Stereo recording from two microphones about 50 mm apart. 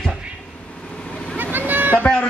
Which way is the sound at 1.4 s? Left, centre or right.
Right.